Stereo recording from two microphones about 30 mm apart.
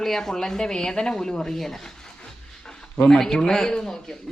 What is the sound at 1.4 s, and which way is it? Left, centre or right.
Speech, centre.